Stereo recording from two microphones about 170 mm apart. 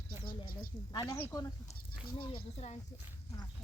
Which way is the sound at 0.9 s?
25° left (ahead or behind).